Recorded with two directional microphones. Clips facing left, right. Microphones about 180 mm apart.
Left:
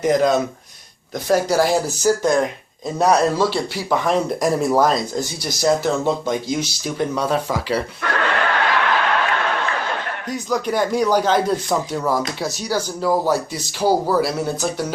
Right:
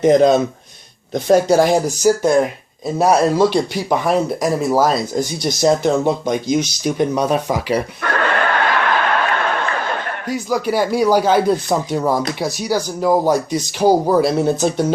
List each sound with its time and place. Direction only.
0.0 s speech: 25° right (ahead or behind); by 5.2 s 5° right (ahead or behind)
5.2 s speech: 20° right (ahead or behind)
8.0 s a sound: 50° right (ahead or behind)
10.2 s speech: 5° right (ahead or behind); by 14.9 s 20° right (ahead or behind)